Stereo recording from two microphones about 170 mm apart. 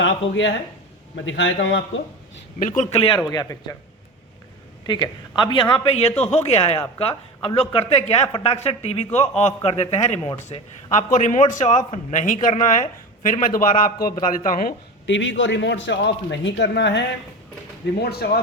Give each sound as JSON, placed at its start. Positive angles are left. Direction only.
{"t": 0.0, "sound": "a man's voice", "side_deg": 90}
{"t": 2.6, "sound": "speech", "side_deg": 50}
{"t": 3.2, "sound": "a man's voice", "side_deg": 20}
{"t": 5.4, "sound": "a man's voice", "side_deg": 30}
{"t": 10.9, "sound": "speech", "side_deg": 50}
{"t": 15.0, "sound": "a man's voice", "side_deg": 90}
{"t": 17.9, "sound": "speech", "side_deg": 70}